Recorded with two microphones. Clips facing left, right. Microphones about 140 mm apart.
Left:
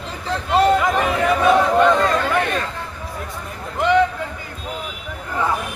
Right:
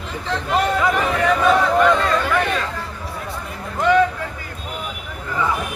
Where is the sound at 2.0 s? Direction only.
35° left (ahead or behind).